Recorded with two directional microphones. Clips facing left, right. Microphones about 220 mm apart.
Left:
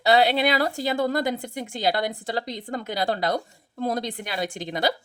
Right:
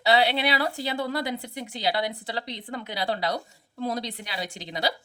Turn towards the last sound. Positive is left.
turn(degrees=50)  # may be behind; listen again after turning